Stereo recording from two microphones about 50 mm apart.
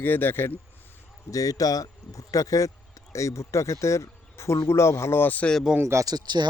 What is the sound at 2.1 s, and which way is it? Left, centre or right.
Speech, left.